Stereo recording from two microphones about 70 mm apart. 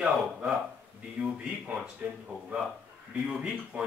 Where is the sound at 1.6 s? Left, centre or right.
Centre.